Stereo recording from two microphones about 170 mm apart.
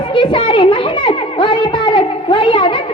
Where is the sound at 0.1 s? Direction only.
30° left (ahead or behind).